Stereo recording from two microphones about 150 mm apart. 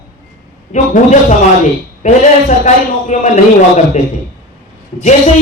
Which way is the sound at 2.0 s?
50° left (ahead or behind).